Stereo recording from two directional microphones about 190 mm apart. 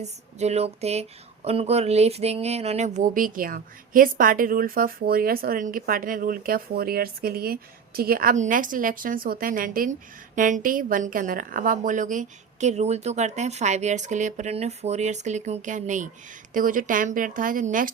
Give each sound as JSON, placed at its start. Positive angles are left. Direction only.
{"t": 0.0, "sound": "a woman's voice", "side_deg": -35}